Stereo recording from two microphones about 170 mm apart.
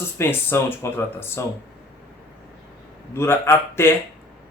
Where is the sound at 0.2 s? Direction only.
15° left (ahead or behind).